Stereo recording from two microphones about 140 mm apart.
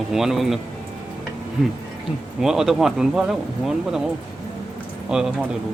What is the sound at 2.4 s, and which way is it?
Speech, 5° right (ahead or behind).